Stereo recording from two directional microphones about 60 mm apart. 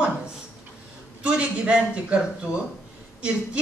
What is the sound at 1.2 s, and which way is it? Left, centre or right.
Speech, centre.